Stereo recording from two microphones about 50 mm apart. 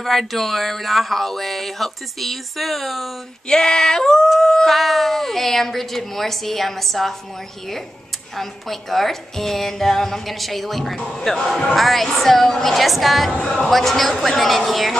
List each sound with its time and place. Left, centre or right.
0.0 s speech: centre
3.4 s a sound: centre
4.7 s speech: centre
8.4 s speech: centre
11.0 s speech: centre
11.2 s a sound: centre
11.7 s speech: centre
13.3 s speech: centre
13.7 s speech: centre